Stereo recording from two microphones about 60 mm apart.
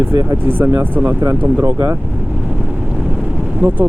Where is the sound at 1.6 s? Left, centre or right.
Right.